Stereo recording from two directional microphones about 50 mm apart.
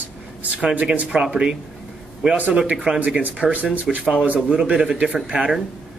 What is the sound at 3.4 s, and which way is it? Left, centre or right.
Speech, centre.